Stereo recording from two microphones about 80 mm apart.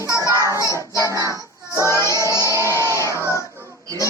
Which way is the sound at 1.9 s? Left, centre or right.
Left.